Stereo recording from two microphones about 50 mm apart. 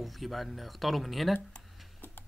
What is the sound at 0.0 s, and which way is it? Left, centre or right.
Speech, centre.